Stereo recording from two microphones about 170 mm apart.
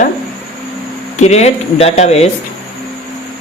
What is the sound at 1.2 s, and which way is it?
Speech, 40° left (ahead or behind).